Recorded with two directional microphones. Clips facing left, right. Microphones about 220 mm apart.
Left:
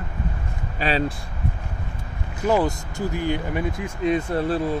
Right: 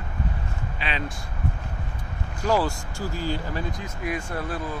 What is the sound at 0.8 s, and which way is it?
Speech, 40° left (ahead or behind).